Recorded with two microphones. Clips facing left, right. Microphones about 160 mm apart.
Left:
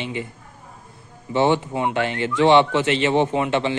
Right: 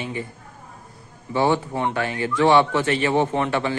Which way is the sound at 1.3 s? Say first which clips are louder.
Left 2 dB; 20° left (ahead or behind).